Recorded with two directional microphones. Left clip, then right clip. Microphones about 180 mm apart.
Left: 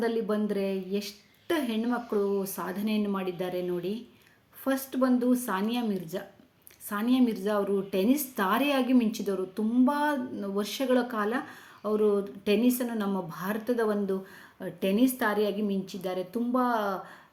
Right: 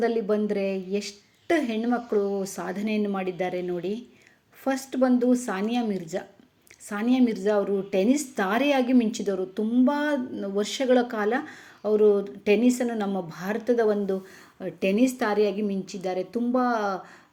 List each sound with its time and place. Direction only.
0.0 s a woman's voice: 15° right (ahead or behind)